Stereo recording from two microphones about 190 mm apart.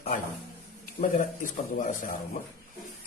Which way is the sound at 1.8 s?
40° left (ahead or behind).